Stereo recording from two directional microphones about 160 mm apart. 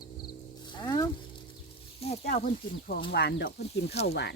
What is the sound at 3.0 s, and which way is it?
Speech, 85° left.